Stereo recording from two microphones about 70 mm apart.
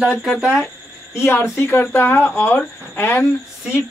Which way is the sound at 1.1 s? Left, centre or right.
Left.